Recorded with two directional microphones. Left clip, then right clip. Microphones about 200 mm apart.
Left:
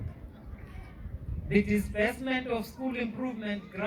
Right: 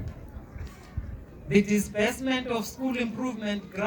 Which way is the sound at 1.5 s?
55° right (ahead or behind).